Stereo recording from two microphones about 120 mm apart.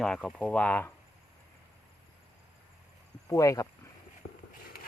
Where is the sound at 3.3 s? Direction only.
30° left (ahead or behind).